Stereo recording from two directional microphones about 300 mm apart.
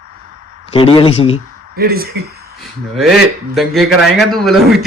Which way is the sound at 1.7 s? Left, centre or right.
Right.